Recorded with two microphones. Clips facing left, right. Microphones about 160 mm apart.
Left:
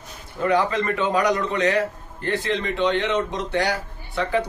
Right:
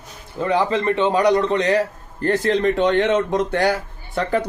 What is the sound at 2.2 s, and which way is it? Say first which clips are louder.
Speech: right 7 dB; 45° right (ahead or behind).